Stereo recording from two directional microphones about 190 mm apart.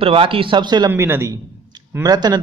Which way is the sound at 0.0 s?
30° right (ahead or behind).